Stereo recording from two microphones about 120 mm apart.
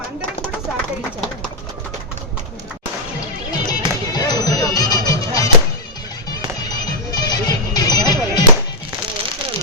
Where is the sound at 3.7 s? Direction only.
35° left (ahead or behind).